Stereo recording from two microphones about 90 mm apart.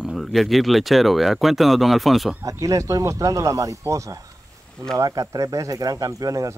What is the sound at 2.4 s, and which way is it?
Speech, 40° right (ahead or behind).